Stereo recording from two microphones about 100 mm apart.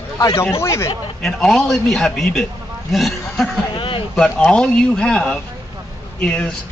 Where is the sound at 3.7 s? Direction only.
55° left (ahead or behind).